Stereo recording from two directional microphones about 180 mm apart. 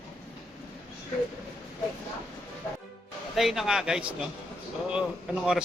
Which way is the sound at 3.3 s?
Centre (ahead or behind).